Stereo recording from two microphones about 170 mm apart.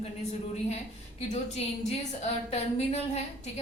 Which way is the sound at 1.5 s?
40° left (ahead or behind).